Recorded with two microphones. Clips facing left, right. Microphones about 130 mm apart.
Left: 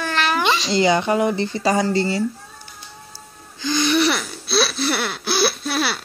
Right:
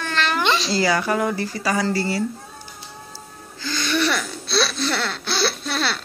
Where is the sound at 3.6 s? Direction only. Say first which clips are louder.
Left 4 dB; 15° left (ahead or behind).